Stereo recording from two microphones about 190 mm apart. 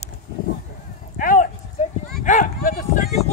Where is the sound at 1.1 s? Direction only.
45° left (ahead or behind).